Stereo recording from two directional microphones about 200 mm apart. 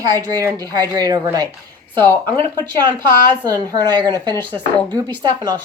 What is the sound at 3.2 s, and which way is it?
Speech, 20° right (ahead or behind).